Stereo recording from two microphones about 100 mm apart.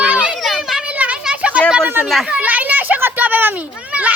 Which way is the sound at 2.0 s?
Centre (ahead or behind).